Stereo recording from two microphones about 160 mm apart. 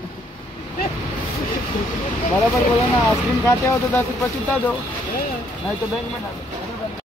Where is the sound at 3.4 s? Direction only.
15° left (ahead or behind).